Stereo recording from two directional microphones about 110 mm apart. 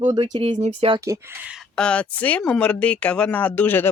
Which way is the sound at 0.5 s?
90° right.